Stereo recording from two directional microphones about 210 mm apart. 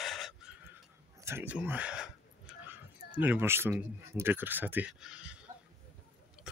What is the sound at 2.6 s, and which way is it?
Speech, 10° right (ahead or behind).